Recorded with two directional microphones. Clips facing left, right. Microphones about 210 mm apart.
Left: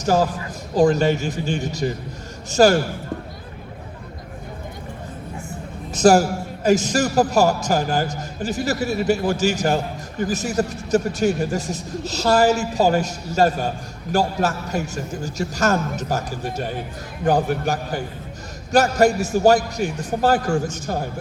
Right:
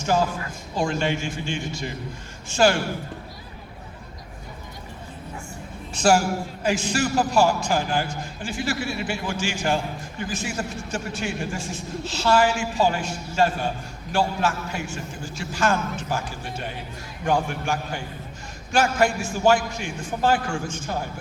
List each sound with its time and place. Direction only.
0.0 s a man's voice: 40° left (ahead or behind)
5.9 s a man's voice: 40° left (ahead or behind)